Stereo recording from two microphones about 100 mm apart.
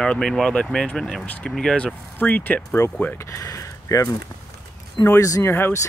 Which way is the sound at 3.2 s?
30° left (ahead or behind).